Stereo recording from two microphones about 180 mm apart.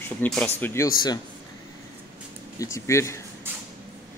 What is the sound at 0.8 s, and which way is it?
Speech, 20° left (ahead or behind).